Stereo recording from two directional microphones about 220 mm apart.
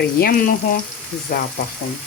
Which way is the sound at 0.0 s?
40° left (ahead or behind).